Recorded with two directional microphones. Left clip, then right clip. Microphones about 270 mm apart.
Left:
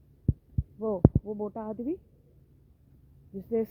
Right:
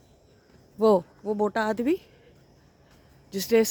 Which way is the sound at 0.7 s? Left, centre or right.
Right.